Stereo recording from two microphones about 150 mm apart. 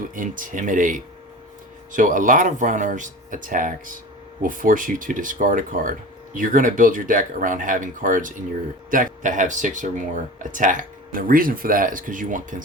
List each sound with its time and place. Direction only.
0.1 s speech: 65° right (ahead or behind)